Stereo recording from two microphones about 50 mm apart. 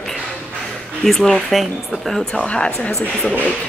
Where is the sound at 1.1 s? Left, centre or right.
Centre.